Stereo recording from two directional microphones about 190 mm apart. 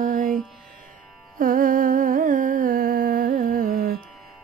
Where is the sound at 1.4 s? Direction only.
45° right (ahead or behind).